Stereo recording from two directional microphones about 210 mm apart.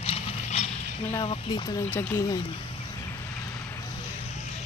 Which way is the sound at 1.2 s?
25° left (ahead or behind).